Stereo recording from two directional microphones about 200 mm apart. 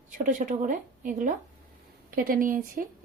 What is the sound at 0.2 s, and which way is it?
A woman's voice, 40° right (ahead or behind).